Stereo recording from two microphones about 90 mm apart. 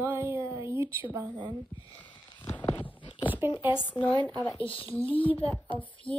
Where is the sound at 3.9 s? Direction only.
60° left (ahead or behind).